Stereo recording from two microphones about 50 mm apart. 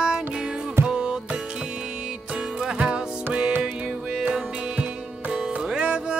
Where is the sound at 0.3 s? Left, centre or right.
Centre.